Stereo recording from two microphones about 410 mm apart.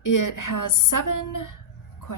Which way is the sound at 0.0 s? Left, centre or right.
Left.